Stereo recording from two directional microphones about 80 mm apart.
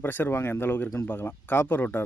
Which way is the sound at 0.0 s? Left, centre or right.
Left.